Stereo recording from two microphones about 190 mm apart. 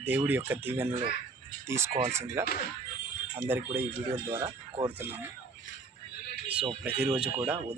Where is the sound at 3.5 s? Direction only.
10° right (ahead or behind).